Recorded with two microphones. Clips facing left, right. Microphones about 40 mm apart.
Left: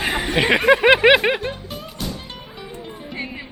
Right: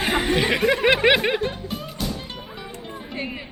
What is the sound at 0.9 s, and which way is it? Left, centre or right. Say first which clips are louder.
Music: left 4 dB; centre.